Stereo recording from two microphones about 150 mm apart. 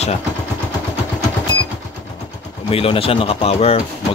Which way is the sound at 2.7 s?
40° left (ahead or behind).